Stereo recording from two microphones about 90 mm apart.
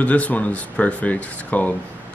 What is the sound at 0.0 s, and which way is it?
Speech, 15° left (ahead or behind).